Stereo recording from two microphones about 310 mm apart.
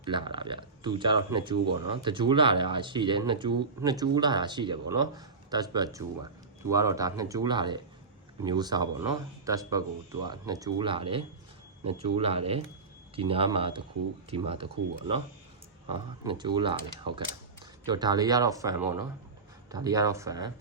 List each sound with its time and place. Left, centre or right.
0.0 s speech: centre